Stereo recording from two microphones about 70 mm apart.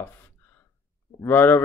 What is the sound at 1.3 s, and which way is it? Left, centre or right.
Speech, left.